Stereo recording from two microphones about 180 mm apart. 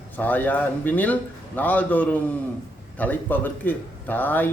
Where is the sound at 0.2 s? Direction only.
10° left (ahead or behind).